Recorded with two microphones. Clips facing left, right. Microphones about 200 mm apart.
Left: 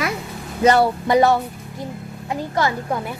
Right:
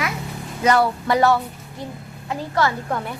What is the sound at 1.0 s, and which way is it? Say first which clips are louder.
A child's voice: left 2 dB; 20° left (ahead or behind).